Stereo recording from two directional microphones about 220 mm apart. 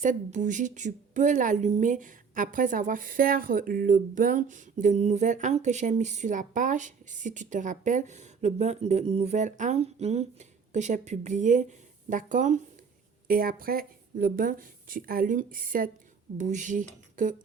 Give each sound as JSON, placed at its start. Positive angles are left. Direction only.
{"t": 0.0, "sound": "a woman's voice", "side_deg": -35}